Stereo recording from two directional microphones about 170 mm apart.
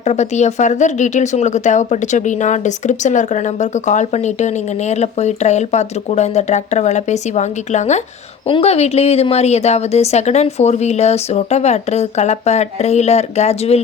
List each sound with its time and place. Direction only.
0.0 s a woman's voice: 40° left (ahead or behind)